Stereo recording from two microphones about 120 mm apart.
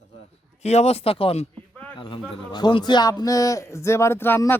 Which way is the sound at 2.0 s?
45° left (ahead or behind).